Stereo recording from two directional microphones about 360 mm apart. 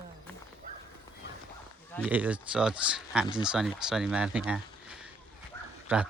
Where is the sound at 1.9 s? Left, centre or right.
Centre.